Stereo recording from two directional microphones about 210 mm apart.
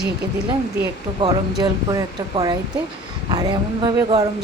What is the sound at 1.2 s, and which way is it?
Speech, 20° right (ahead or behind).